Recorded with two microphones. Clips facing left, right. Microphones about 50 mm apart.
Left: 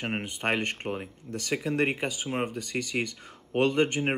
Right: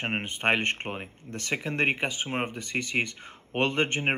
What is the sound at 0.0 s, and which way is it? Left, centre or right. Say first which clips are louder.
Speech: right 3 dB; right.